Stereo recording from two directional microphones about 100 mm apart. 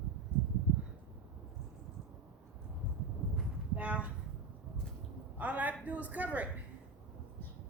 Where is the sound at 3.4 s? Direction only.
15° right (ahead or behind).